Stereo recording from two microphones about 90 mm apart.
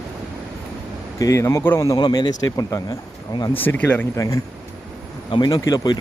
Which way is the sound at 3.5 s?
20° left (ahead or behind).